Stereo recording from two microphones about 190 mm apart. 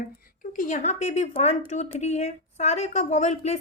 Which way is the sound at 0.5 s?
40° left (ahead or behind).